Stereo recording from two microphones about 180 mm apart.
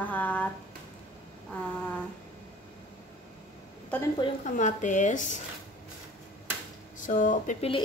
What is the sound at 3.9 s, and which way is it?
Speech, 10° left (ahead or behind).